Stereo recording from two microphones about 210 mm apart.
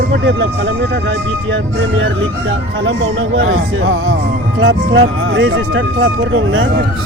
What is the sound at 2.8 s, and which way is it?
Speech, 65° right (ahead or behind).